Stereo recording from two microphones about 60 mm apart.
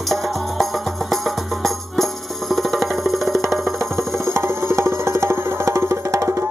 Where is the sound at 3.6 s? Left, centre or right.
Right.